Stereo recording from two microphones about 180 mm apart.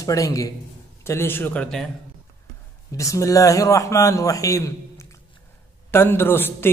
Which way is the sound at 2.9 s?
15° left (ahead or behind).